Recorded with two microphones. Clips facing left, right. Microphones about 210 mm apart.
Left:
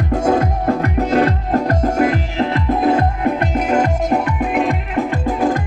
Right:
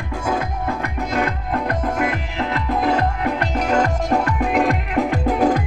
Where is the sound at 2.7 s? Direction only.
30° left (ahead or behind).